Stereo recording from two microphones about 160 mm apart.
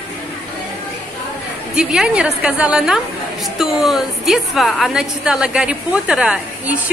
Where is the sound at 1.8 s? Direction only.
5° right (ahead or behind).